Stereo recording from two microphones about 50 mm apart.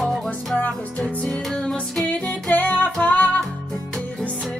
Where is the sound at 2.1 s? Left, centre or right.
Left.